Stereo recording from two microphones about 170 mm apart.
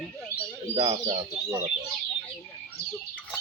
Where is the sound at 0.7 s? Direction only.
35° right (ahead or behind).